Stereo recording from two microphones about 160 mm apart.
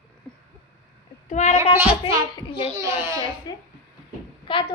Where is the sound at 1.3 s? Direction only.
50° left (ahead or behind).